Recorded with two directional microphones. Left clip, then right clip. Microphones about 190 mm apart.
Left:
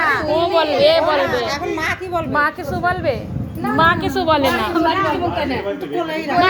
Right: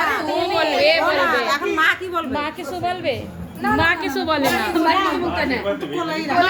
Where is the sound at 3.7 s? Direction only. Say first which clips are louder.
Left 5 dB; 10° left (ahead or behind).